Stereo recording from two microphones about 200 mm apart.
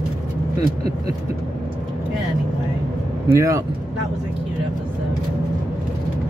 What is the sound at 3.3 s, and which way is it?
Speech, 15° right (ahead or behind).